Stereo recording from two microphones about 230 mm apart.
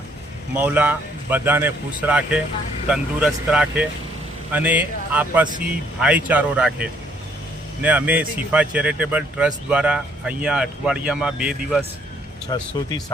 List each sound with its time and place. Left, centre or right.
0.5 s speech: centre
12.5 s speech: centre